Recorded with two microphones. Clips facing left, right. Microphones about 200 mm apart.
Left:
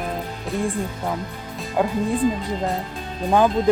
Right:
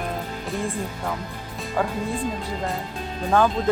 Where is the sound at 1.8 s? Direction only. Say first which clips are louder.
Left 3 dB; 20° left (ahead or behind).